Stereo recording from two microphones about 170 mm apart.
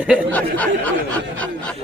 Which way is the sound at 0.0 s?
5° right (ahead or behind).